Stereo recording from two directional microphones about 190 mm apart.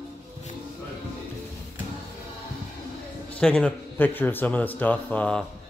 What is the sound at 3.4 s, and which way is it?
Speech, 5° left (ahead or behind).